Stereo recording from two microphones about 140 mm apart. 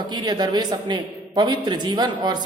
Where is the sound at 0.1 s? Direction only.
30° right (ahead or behind).